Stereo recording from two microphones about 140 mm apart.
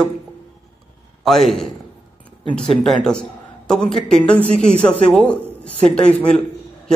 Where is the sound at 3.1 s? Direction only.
5° left (ahead or behind).